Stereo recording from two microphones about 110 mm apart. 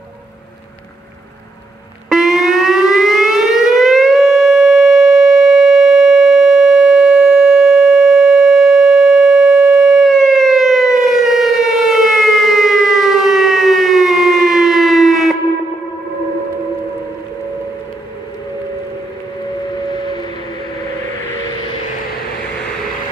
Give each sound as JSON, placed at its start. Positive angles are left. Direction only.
{"t": 2.0, "sound": "civil defense siren", "side_deg": 0}
{"t": 19.9, "sound": "music", "side_deg": 40}